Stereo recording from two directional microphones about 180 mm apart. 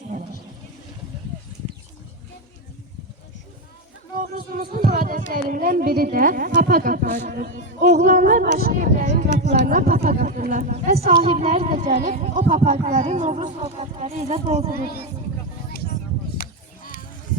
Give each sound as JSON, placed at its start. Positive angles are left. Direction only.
{"t": 4.2, "sound": "music", "side_deg": -50}
{"t": 5.3, "sound": "a woman's voice", "side_deg": -55}
{"t": 11.0, "sound": "speech", "side_deg": -35}
{"t": 16.4, "sound": "a sound", "side_deg": 50}